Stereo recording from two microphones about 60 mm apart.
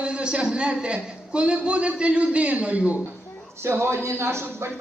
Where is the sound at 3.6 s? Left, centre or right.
Right.